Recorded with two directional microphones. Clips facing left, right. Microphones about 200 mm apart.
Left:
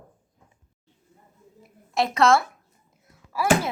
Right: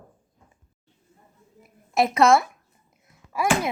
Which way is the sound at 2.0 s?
20° right (ahead or behind).